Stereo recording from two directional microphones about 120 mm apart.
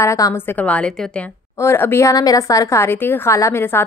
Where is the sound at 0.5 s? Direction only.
10° left (ahead or behind).